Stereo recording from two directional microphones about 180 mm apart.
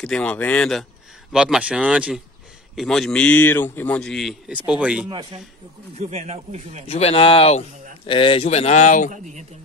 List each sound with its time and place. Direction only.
0.0 s a man's voice: 5° left (ahead or behind)
5.9 s speech: 35° right (ahead or behind)
6.9 s speech: 35° left (ahead or behind)
9.1 s speech: 40° right (ahead or behind)